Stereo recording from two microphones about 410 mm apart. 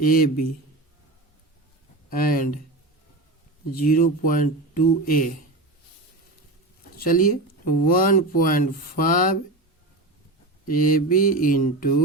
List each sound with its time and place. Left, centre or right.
0.0 s speech: left
2.0 s speech: left
3.8 s speech: centre
7.0 s speech: centre
10.7 s speech: centre